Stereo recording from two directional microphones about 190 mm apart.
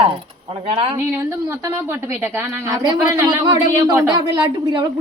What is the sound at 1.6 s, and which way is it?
Speech, 10° right (ahead or behind).